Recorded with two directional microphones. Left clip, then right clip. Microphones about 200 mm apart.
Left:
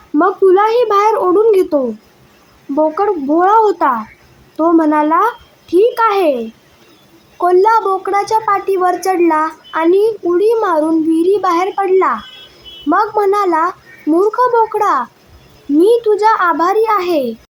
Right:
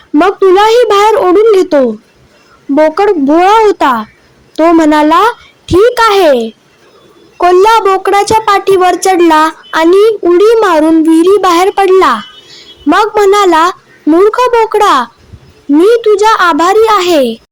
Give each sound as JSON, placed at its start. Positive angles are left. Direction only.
{"t": 0.2, "sound": "a sound", "side_deg": -35}
{"t": 2.7, "sound": "a woman's voice", "side_deg": -30}
{"t": 7.3, "sound": "speech", "side_deg": -35}